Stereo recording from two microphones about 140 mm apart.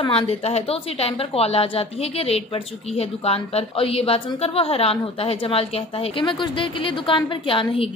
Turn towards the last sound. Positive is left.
turn(degrees=40)  # may be behind; listen again after turning